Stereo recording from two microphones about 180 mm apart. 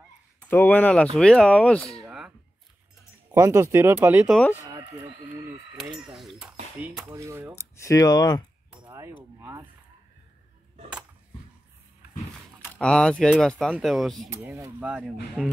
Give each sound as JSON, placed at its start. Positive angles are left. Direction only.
{"t": 0.5, "sound": "speech", "side_deg": 10}
{"t": 2.0, "sound": "a sound", "side_deg": -5}
{"t": 3.3, "sound": "speech", "side_deg": -15}
{"t": 5.9, "sound": "speech", "side_deg": 0}
{"t": 7.1, "sound": "speech", "side_deg": -15}
{"t": 7.5, "sound": "speech", "side_deg": 15}
{"t": 8.7, "sound": "a sound", "side_deg": -20}
{"t": 12.7, "sound": "speech", "side_deg": 5}
{"t": 14.5, "sound": "speech", "side_deg": -10}